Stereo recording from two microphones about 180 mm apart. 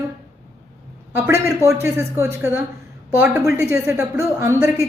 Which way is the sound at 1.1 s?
15° right (ahead or behind).